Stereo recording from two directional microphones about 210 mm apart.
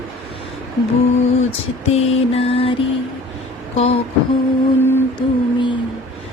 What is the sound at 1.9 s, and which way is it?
Music, 30° left (ahead or behind).